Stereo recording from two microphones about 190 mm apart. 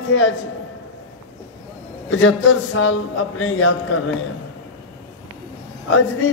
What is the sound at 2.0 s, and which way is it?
A man's voice, 90° left.